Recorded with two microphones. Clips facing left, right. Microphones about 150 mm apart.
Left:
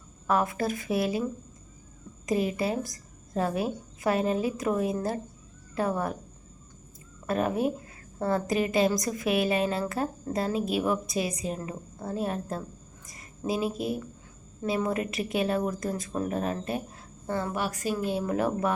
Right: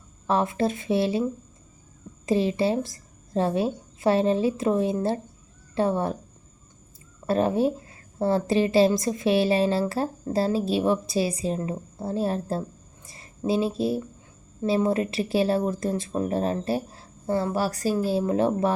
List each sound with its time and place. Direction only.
0.3 s a woman's voice: 25° right (ahead or behind)
2.2 s a woman's voice: 30° right (ahead or behind)
7.3 s a woman's voice: 30° right (ahead or behind)